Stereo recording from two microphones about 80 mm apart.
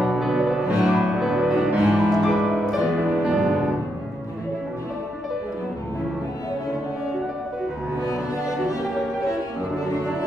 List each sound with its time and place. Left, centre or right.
0.0 s music: centre